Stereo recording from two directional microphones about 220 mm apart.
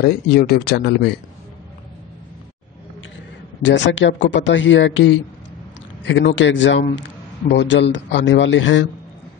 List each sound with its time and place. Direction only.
0.0 s speech: 45° left (ahead or behind)
3.6 s a man's voice: 55° left (ahead or behind)